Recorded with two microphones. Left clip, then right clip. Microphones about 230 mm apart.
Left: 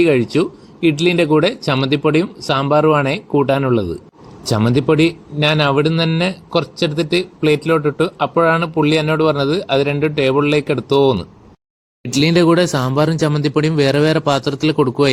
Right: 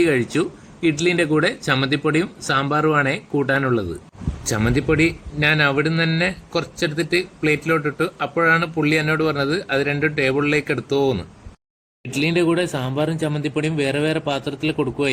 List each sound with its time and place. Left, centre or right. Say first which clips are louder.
0.0 s speech: left 5 dB; centre
12.1 s speech: left 6 dB; left